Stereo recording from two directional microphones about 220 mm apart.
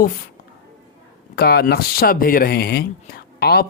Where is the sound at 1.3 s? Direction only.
45° left (ahead or behind).